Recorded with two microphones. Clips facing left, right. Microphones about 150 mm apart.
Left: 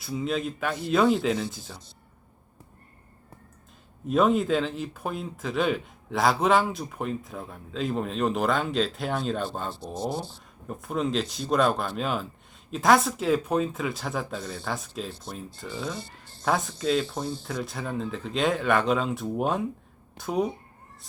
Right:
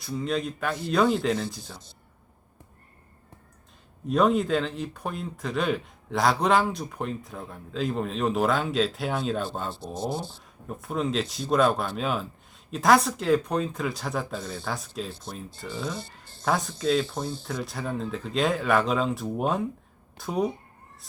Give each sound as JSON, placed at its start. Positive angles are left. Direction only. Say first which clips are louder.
{"t": 0.0, "sound": "speech", "louder": "even", "side_deg": 5}
{"t": 4.0, "sound": "speech", "louder": "even", "side_deg": 0}